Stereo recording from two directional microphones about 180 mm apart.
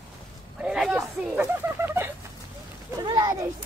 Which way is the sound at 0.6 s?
5° right (ahead or behind).